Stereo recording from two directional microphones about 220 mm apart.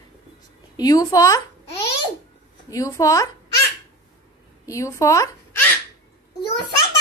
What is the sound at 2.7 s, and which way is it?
Speech, 15° left (ahead or behind).